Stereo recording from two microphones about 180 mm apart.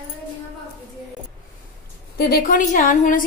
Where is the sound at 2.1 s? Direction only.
60° left (ahead or behind).